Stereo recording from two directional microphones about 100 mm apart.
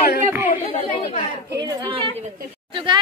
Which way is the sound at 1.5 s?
35° right (ahead or behind).